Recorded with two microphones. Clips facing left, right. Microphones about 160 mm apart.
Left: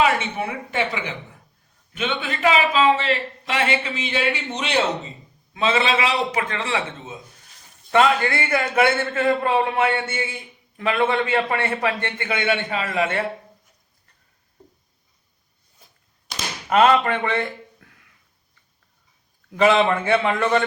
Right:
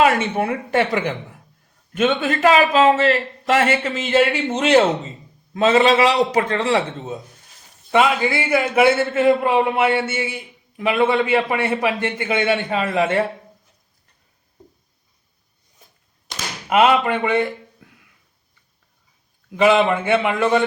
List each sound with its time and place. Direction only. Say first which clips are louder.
0.0 s a man's voice: right 4 dB; 50° right (ahead or behind)
7.9 s a man's voice: right 1 dB; 5° right (ahead or behind); by 13.0 s 25° right (ahead or behind)
16.6 s speech: right 1 dB; 10° right (ahead or behind)
19.5 s a man's voice: right 2 dB; 5° right (ahead or behind)